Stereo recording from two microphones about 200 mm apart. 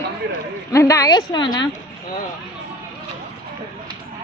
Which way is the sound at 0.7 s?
15° left (ahead or behind).